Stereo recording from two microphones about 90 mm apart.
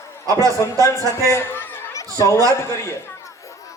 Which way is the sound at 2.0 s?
35° left (ahead or behind).